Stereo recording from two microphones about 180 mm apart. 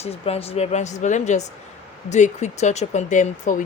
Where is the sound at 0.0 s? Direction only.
35° left (ahead or behind).